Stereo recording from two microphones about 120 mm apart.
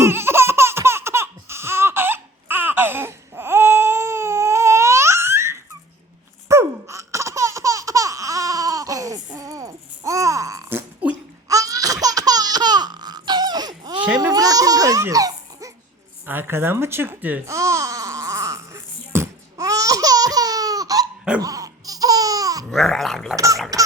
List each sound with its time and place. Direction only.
0.0 s baby laughter: 20° right (ahead or behind)
6.5 s laughter: 25° right (ahead or behind)
14.2 s babbling: 30° right (ahead or behind)
16.2 s speech: 15° right (ahead or behind)
17.5 s music: 25° right (ahead or behind)
21.4 s laughter: 30° right (ahead or behind)
22.7 s gargling: centre (ahead or behind)
23.3 s a sound: 30° right (ahead or behind)